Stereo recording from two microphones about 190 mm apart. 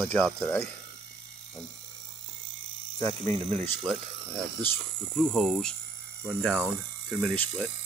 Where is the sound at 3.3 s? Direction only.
35° right (ahead or behind).